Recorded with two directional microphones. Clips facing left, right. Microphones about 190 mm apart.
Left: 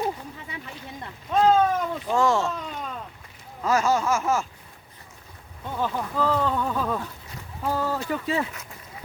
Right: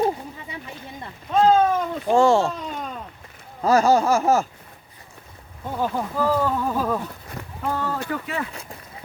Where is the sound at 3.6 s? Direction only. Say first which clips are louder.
Right 5 dB; 35° right (ahead or behind).